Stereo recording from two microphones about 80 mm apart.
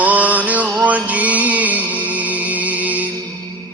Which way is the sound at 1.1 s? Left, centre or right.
Centre.